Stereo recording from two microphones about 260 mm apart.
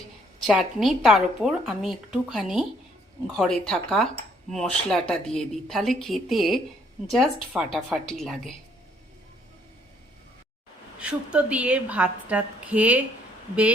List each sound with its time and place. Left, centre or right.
0.4 s speech: centre
11.0 s speech: centre